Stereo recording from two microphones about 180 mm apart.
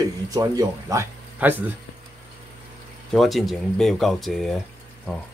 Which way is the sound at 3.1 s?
Centre (ahead or behind).